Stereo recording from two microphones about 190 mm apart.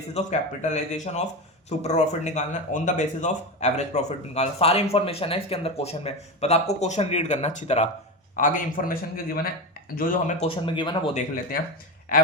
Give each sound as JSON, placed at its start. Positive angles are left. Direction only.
{"t": 0.1, "sound": "a man's voice", "side_deg": 40}
{"t": 10.4, "sound": "speech", "side_deg": 25}
{"t": 12.1, "sound": "a man's voice", "side_deg": 50}